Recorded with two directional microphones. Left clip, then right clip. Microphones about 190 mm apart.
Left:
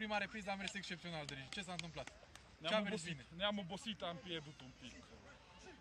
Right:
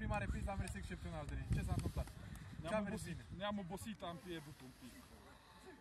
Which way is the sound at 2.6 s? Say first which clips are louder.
Left 3 dB; 5° left (ahead or behind).